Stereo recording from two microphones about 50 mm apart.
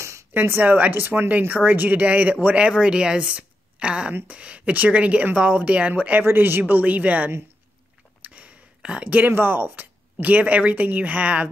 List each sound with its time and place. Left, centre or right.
0.0 s a sound: right
0.3 s speech: right
6.2 s speech: right
6.7 s speech: right
8.2 s a sound: right
9.0 s speech: right
10.2 s speech: right